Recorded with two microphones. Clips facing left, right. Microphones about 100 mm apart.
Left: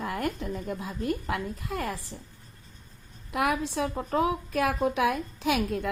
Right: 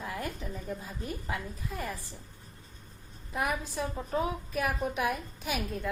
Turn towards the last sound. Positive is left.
turn(degrees=90)